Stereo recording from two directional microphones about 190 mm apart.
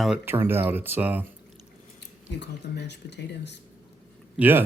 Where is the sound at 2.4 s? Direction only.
65° left (ahead or behind).